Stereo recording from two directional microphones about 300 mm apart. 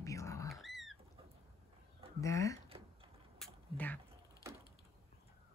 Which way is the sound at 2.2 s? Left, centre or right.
Centre.